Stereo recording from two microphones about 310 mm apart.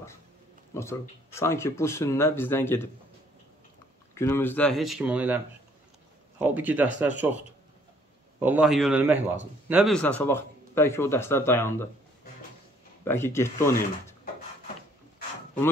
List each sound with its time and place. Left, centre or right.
0.7 s a man's voice: centre
4.1 s speech: centre
6.4 s speech: centre
8.4 s a man's voice: centre
13.0 s a man's voice: centre